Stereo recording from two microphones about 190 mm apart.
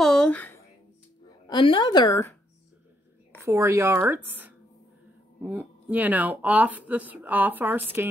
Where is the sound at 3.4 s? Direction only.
15° right (ahead or behind).